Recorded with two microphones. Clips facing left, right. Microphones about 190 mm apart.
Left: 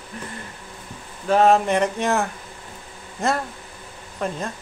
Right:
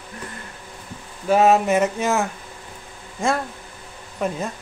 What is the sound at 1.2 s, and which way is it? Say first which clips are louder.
Speech: right 1 dB; 5° right (ahead or behind).